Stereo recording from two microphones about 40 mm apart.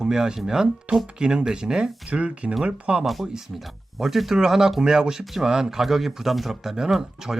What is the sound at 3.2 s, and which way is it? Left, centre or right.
Speech, centre.